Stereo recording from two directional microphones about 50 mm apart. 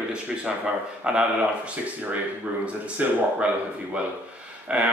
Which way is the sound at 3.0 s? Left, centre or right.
Right.